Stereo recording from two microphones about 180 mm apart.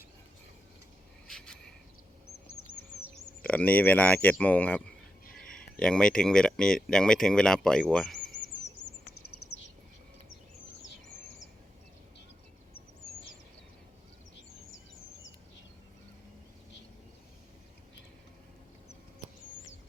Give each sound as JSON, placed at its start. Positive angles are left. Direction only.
{"t": 1.3, "sound": "cricket", "side_deg": 5}
{"t": 3.0, "sound": "speech", "side_deg": 10}
{"t": 9.2, "sound": "a sound", "side_deg": 90}